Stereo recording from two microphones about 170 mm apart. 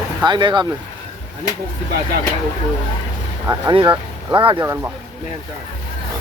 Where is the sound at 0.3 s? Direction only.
25° right (ahead or behind).